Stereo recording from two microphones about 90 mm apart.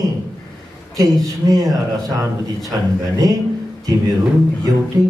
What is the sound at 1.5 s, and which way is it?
A man's voice, 40° right (ahead or behind).